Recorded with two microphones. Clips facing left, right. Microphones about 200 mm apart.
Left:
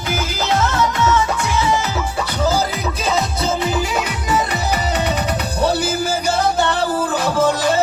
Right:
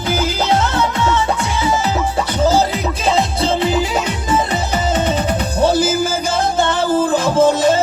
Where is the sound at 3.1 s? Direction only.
30° right (ahead or behind).